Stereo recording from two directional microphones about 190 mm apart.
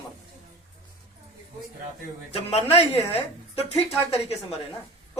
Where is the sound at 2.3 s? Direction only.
35° left (ahead or behind).